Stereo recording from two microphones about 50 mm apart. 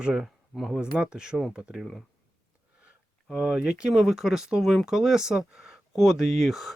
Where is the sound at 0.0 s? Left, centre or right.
Centre.